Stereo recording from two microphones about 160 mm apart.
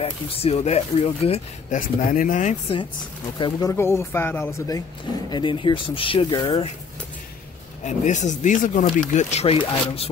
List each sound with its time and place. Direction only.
0.0 s speech: 35° left (ahead or behind)
1.8 s speech: 55° left (ahead or behind)
3.3 s speech: 25° left (ahead or behind)
5.3 s speech: 30° left (ahead or behind)
7.8 s speech: 50° left (ahead or behind)